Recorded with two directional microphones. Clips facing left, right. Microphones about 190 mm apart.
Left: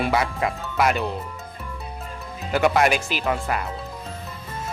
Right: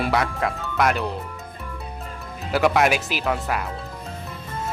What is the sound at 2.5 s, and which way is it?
Speech, centre (ahead or behind).